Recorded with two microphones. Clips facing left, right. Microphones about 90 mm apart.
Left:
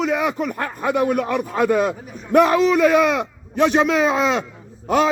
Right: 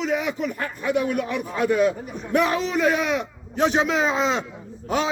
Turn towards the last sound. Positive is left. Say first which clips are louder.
# left 6 dB
turn(degrees=55)  # may be behind; listen again after turning